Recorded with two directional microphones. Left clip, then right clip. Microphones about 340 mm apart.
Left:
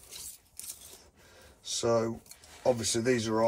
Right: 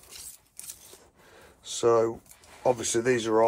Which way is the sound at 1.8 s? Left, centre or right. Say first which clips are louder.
Right 6 dB; centre.